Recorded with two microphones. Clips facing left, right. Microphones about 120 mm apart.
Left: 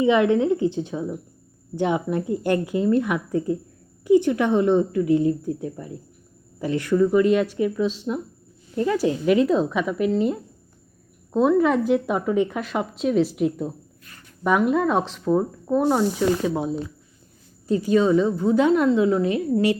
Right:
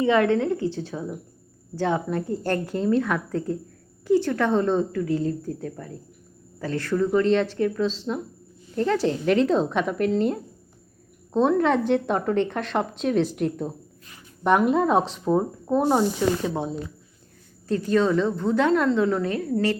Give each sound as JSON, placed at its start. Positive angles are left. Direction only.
{"t": 0.0, "sound": "a woman's voice", "side_deg": 15}
{"t": 15.2, "sound": "a woman's voice", "side_deg": -10}
{"t": 16.1, "sound": "a woman's voice", "side_deg": 5}